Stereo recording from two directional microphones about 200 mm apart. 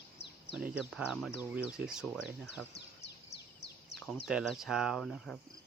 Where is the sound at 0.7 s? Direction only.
5° right (ahead or behind).